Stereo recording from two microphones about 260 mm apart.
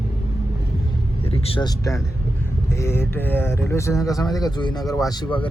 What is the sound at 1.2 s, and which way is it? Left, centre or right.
Speech, left.